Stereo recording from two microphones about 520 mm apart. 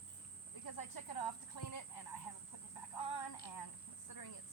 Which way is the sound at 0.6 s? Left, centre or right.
Left.